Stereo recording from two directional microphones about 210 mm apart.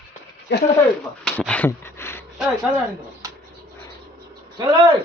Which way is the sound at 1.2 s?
5° left (ahead or behind).